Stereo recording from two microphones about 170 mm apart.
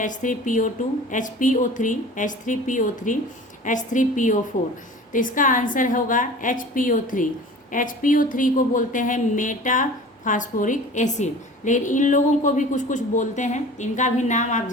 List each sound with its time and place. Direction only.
0.0 s a woman's voice: 50° left (ahead or behind)